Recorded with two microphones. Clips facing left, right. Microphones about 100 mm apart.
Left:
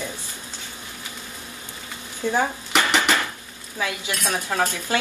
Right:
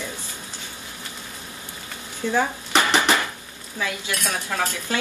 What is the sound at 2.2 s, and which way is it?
Speech, 20° left (ahead or behind).